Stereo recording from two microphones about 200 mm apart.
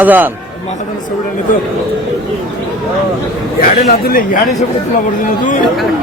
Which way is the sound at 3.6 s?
50° left (ahead or behind).